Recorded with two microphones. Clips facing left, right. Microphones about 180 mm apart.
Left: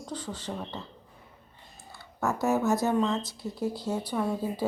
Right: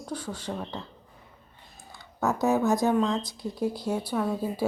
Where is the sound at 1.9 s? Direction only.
15° right (ahead or behind).